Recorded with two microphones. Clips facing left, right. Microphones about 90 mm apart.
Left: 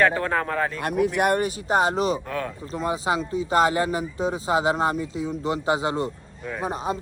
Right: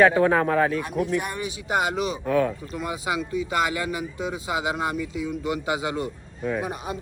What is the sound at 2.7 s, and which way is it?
Speech, 30° left (ahead or behind).